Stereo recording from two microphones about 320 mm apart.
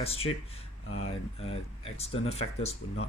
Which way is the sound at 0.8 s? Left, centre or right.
Left.